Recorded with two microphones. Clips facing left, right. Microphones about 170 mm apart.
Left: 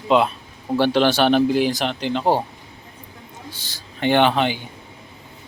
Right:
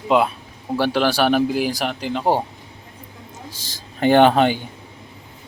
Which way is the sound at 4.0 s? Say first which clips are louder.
Right 4 dB; 40° right (ahead or behind).